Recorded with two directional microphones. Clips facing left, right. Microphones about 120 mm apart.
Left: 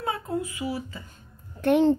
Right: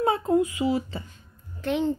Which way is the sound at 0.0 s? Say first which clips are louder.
Right 7 dB; 25° right (ahead or behind).